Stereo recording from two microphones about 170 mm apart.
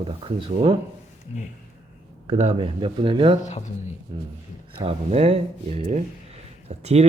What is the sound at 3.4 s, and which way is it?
Speech, 45° left (ahead or behind).